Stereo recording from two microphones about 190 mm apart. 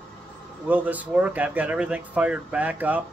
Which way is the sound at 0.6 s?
10° right (ahead or behind).